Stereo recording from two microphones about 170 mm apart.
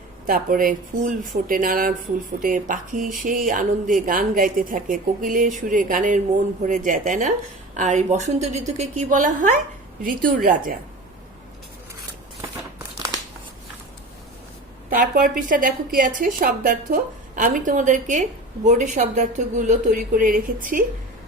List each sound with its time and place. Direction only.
0.3 s a woman's voice: 55° right (ahead or behind)
14.8 s a woman's voice: 55° right (ahead or behind)